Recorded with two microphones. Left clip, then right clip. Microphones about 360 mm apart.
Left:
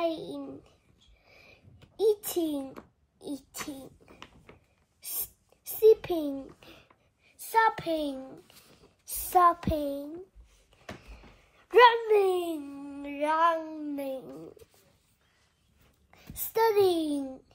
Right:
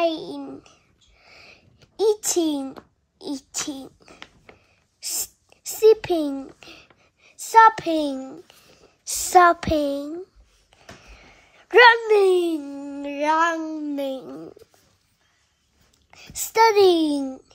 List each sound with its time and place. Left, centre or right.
0.3 s child singing: right
1.4 s a sound: right
7.3 s a child's voice: right
11.5 s speech: right
16.1 s a child's voice: right